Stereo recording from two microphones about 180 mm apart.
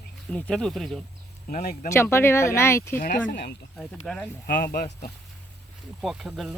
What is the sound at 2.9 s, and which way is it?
Speech, 50° left (ahead or behind).